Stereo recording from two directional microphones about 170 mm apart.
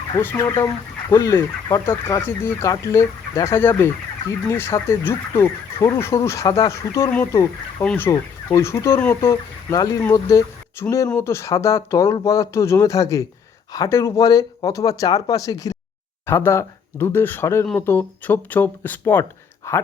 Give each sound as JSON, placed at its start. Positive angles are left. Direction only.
{"t": 0.2, "sound": "speech", "side_deg": 15}